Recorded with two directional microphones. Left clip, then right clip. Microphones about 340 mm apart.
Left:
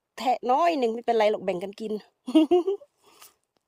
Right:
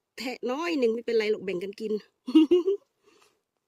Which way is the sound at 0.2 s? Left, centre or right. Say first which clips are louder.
Left 9 dB; centre.